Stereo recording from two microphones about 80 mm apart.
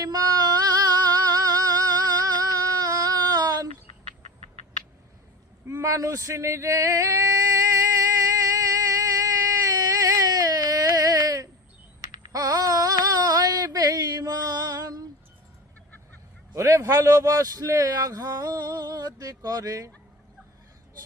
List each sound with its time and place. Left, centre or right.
0.0 s singing: right
5.6 s male singing: right
12.3 s a sound: right
16.6 s a man's voice: right